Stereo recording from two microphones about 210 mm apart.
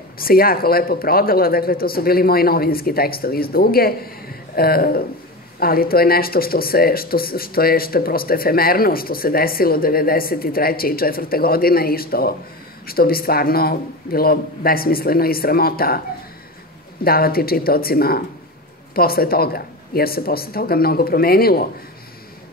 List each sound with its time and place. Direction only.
0.2 s speech: 45° left (ahead or behind)
17.0 s speech: 45° left (ahead or behind)